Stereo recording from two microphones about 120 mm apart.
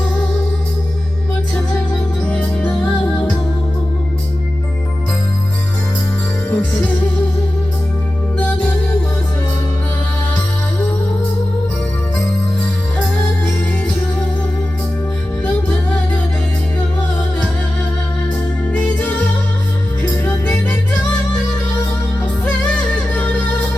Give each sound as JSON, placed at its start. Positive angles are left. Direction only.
{"t": 2.3, "sound": "music", "side_deg": 10}
{"t": 6.5, "sound": "music", "side_deg": 15}
{"t": 20.0, "sound": "music", "side_deg": 15}
{"t": 22.7, "sound": "music", "side_deg": 10}